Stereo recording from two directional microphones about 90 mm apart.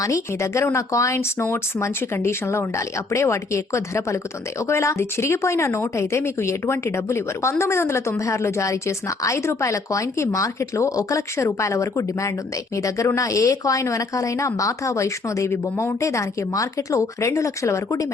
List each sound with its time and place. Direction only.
0.0 s speech: 35° left (ahead or behind)